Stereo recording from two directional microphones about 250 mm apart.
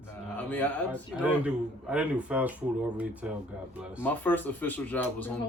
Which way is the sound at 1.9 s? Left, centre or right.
Centre.